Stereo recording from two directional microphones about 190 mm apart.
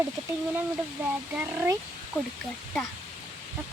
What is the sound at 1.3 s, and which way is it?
Speech, 10° right (ahead or behind).